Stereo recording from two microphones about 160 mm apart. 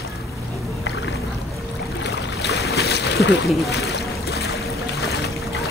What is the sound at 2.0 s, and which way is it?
Boat, 90° left.